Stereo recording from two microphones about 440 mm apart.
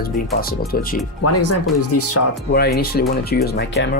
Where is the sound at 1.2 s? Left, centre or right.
Left.